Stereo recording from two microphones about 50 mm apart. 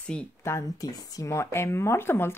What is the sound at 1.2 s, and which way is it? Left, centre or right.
Speech, left.